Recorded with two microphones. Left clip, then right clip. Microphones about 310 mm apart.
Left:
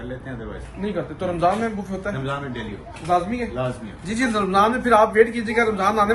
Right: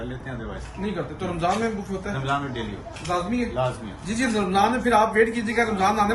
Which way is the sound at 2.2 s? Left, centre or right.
Centre.